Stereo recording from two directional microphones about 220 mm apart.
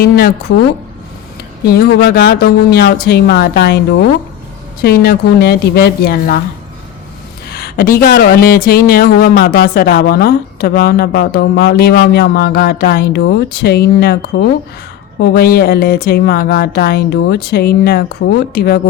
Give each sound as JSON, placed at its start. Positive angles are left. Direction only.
{"t": 0.0, "sound": "a woman's voice", "side_deg": 40}
{"t": 1.6, "sound": "speech", "side_deg": 45}
{"t": 7.5, "sound": "a sound", "side_deg": 45}
{"t": 8.0, "sound": "speech", "side_deg": 45}